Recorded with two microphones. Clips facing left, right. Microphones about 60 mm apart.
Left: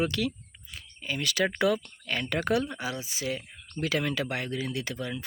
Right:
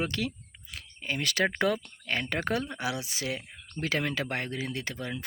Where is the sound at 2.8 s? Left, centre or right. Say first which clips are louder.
Right 1 dB; right.